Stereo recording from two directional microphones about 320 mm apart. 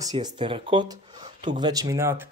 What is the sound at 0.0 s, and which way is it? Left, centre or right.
Speech, centre.